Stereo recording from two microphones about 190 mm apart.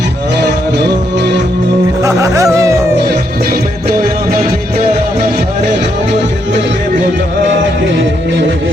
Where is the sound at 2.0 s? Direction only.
15° right (ahead or behind).